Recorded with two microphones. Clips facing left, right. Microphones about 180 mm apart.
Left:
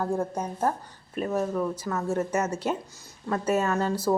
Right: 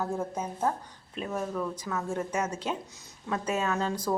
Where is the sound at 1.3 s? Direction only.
10° left (ahead or behind).